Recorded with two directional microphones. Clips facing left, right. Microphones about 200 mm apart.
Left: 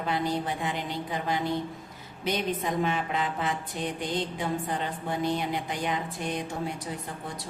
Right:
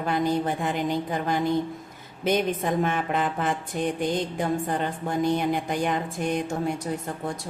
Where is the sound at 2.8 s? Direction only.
50° right (ahead or behind).